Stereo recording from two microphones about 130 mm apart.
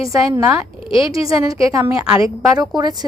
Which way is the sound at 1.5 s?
25° right (ahead or behind).